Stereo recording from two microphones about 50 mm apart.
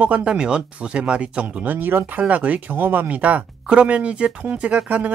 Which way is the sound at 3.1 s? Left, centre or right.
Right.